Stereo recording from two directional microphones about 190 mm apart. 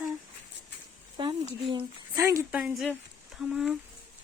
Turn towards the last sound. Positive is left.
turn(degrees=-5)  # may be behind; listen again after turning